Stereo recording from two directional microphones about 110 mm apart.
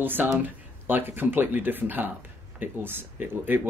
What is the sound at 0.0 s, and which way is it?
Speech, 15° right (ahead or behind).